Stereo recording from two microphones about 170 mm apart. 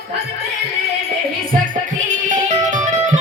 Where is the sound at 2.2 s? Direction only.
45° right (ahead or behind).